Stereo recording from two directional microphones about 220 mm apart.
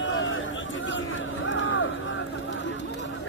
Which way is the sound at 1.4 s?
60° left (ahead or behind).